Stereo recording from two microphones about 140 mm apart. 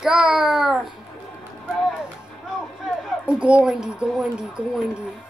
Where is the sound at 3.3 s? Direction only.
10° right (ahead or behind).